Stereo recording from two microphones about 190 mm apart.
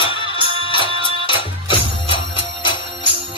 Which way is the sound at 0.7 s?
25° left (ahead or behind).